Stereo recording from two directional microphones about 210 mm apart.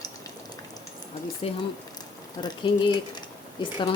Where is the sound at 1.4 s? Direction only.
30° left (ahead or behind).